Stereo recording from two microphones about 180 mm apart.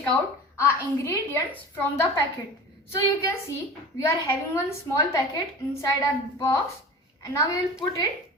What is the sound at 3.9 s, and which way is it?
A woman's voice, 15° left (ahead or behind).